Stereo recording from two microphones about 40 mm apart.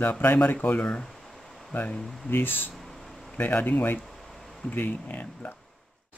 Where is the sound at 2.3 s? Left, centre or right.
Left.